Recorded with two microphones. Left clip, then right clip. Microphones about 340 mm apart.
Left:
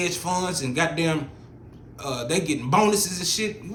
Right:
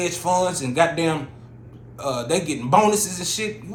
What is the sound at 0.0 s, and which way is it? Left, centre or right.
A man's voice, centre.